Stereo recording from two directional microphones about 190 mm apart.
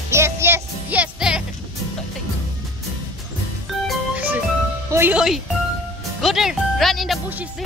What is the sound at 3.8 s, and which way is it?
Music, 5° right (ahead or behind).